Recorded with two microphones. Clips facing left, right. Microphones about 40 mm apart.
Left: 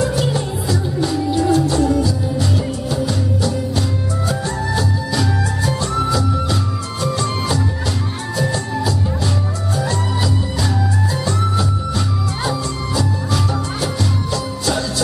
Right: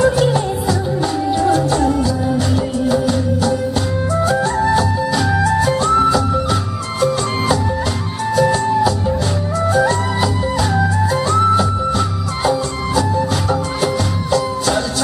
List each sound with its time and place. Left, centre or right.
1.5 s music: right
5.5 s music: centre
8.4 s music: centre